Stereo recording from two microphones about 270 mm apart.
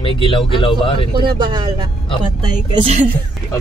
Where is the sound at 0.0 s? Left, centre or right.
Centre.